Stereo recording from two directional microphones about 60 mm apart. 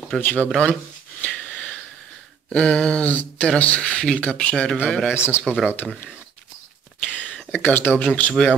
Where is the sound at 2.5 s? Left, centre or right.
Centre.